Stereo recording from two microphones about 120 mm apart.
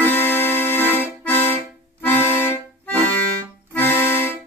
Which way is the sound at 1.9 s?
15° left (ahead or behind).